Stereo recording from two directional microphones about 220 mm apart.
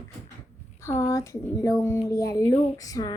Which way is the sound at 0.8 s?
15° left (ahead or behind).